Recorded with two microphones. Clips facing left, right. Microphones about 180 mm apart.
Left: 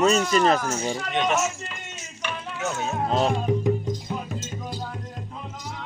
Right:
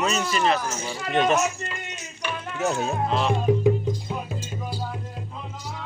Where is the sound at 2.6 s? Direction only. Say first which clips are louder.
Right 4 dB; 35° right (ahead or behind).